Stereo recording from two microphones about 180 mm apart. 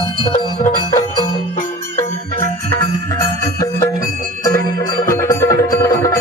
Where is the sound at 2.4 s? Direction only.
50° right (ahead or behind).